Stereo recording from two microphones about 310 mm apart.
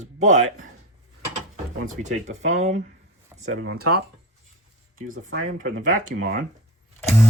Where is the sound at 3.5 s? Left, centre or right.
Right.